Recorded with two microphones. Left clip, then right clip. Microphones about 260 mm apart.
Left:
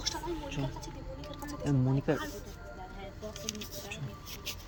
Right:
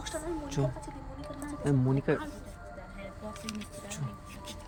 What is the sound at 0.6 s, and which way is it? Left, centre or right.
Speech, right.